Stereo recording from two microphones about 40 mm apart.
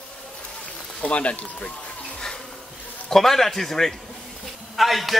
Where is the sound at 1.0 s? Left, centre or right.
Left.